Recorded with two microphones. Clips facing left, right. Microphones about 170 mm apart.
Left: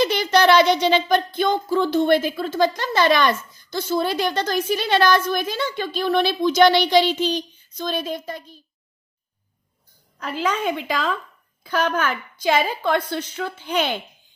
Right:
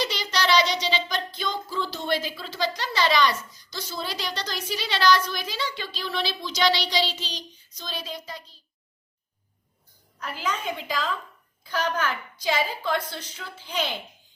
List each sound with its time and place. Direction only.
0.0 s speech: 55° left (ahead or behind)
10.3 s a woman's voice: 65° left (ahead or behind)